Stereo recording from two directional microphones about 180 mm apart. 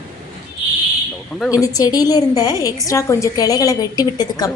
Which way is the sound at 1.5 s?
20° left (ahead or behind).